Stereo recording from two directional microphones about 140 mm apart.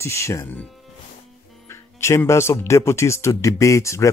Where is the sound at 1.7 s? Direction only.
20° left (ahead or behind).